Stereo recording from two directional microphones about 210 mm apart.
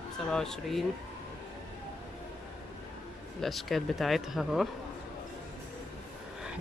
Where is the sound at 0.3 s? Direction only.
Centre (ahead or behind).